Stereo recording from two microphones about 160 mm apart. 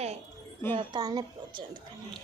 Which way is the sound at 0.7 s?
25° right (ahead or behind).